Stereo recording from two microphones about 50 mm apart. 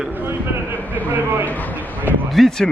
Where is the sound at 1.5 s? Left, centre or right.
Left.